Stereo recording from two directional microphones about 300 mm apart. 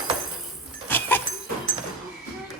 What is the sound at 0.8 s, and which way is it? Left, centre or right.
Goat, centre.